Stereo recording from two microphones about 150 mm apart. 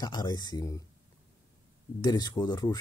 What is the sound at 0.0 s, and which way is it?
Speech, 30° left (ahead or behind).